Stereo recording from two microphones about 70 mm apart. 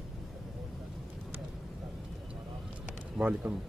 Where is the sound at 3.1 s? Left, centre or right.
Right.